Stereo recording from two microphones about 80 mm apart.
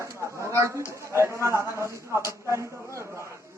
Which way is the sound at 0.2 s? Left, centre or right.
Right.